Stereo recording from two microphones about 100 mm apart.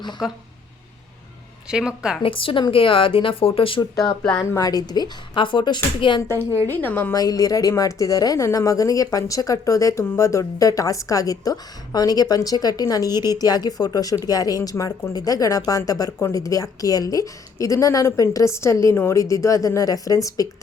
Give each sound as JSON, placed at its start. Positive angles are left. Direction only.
{"t": 0.2, "sound": "speech", "side_deg": 0}
{"t": 1.7, "sound": "speech", "side_deg": -10}
{"t": 2.2, "sound": "a woman's voice", "side_deg": 60}
{"t": 3.8, "sound": "a woman's voice", "side_deg": 40}
{"t": 6.7, "sound": "a woman's voice", "side_deg": 20}
{"t": 7.1, "sound": "a woman's voice", "side_deg": 40}